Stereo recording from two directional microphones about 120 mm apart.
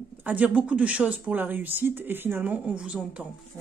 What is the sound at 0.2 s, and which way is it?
Speech, 15° right (ahead or behind).